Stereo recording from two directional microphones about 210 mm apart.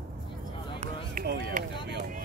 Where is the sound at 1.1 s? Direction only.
45° right (ahead or behind).